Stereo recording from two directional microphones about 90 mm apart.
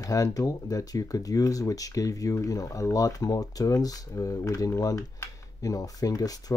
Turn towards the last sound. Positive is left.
turn(degrees=40)  # may be behind; listen again after turning